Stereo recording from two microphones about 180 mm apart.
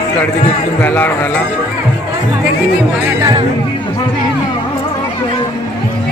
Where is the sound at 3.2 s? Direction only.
20° right (ahead or behind).